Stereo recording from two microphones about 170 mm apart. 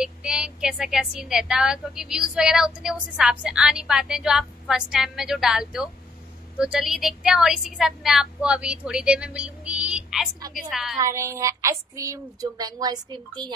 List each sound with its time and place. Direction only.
0.0 s a woman's voice: 5° right (ahead or behind)
11.0 s speech: 15° right (ahead or behind)